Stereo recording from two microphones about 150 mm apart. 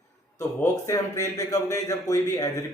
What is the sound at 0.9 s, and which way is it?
A man's voice, 25° left (ahead or behind).